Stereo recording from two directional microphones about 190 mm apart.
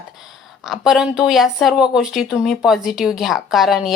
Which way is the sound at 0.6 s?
Centre (ahead or behind).